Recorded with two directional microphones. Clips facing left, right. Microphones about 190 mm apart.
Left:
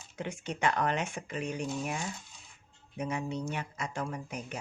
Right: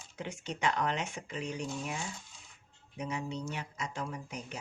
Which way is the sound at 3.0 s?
55° left (ahead or behind).